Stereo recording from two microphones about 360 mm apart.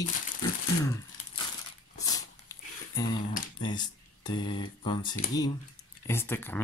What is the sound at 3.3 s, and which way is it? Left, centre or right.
Speech, centre.